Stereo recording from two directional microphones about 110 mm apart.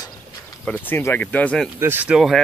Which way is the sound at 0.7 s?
20° left (ahead or behind).